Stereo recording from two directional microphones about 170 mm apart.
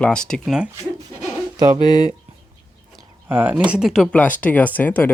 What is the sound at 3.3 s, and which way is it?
Speech, 10° right (ahead or behind).